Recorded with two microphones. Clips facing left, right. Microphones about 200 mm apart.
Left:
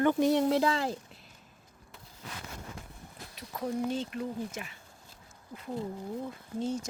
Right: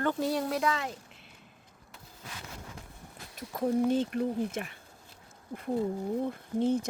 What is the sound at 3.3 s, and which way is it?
Speech, 50° right (ahead or behind).